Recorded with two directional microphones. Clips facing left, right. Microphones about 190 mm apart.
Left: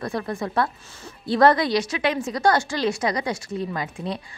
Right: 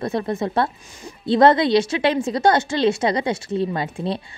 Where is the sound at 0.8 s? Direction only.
15° right (ahead or behind).